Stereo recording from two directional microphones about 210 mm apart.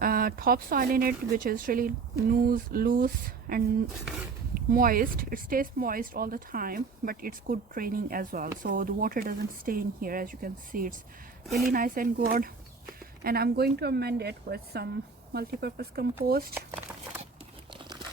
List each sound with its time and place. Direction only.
0.0 s speech: 45° right (ahead or behind)
11.4 s a woman's voice: centre (ahead or behind)
11.7 s speech: 40° right (ahead or behind)